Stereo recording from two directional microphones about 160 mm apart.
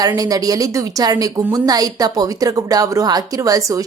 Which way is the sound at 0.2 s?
25° right (ahead or behind).